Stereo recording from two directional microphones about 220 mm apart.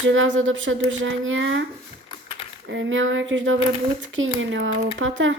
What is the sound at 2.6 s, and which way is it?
Speech, 60° right (ahead or behind).